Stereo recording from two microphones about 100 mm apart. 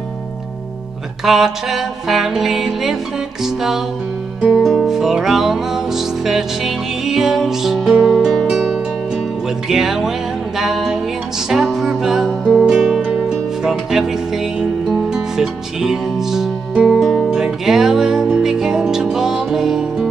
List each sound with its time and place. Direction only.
1.2 s music: 5° right (ahead or behind)